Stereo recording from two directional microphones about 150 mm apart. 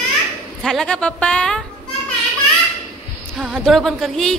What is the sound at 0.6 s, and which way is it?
Speech, 5° left (ahead or behind).